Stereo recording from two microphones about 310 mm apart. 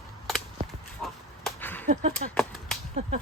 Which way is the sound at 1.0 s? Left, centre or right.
Centre.